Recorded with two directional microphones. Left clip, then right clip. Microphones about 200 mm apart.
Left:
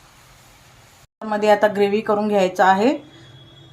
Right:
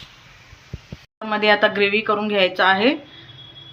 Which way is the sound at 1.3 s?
35° left (ahead or behind).